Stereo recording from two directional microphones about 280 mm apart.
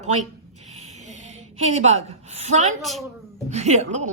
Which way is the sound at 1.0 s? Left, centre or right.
Right.